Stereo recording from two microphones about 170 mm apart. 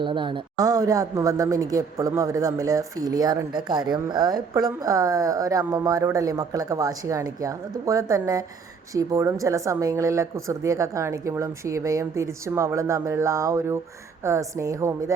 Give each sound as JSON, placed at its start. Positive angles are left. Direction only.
{"t": 0.0, "sound": "a woman's voice", "side_deg": -30}